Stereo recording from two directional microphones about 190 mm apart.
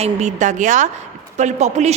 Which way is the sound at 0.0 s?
35° right (ahead or behind).